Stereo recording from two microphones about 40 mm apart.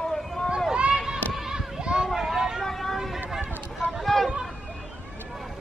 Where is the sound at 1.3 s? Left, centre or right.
Centre.